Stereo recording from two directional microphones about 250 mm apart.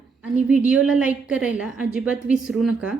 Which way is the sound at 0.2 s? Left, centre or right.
Centre.